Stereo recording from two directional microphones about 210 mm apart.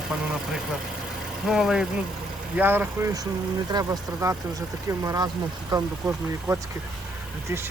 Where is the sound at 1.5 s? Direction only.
5° right (ahead or behind).